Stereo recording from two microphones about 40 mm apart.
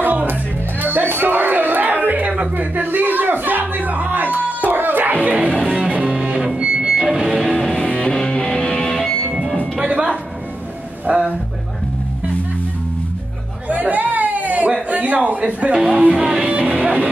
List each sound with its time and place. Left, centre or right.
0.0 s music: right
2.5 s a sound: right
3.3 s music: right
4.6 s music: right
6.6 s a sound: right
7.2 s music: centre
7.7 s music: left
9.3 s music: centre
9.8 s music: right
11.1 s a sound: right
13.7 s chatter: right
14.9 s a sound: right
16.2 s music: right
16.4 s music: right